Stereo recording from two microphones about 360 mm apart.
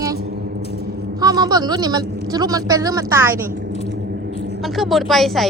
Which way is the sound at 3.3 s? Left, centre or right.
Right.